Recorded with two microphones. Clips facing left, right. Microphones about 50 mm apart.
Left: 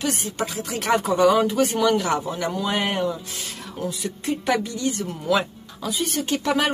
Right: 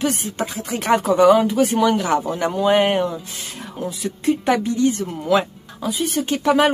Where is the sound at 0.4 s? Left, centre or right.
Right.